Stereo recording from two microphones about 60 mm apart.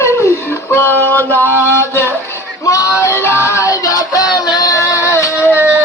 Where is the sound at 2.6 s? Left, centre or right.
Left.